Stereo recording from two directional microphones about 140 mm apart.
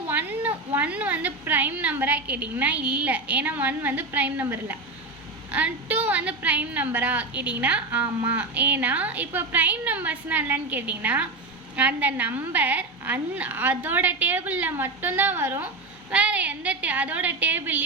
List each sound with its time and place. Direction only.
0.1 s a woman's voice: 15° right (ahead or behind)